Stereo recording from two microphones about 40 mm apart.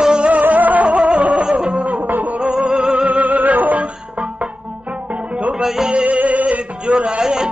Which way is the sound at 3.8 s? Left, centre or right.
Right.